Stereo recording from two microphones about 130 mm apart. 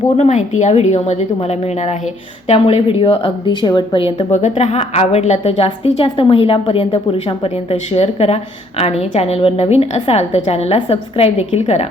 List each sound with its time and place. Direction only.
0.2 s a woman's voice: 65° left (ahead or behind); by 4.3 s 40° left (ahead or behind)
4.3 s speech: 60° left (ahead or behind)
5.4 s a woman's voice: 45° left (ahead or behind)